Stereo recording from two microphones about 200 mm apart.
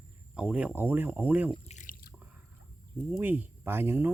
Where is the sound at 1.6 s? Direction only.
40° left (ahead or behind).